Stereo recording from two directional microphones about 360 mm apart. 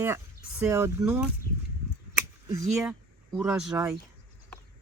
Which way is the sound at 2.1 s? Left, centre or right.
Centre.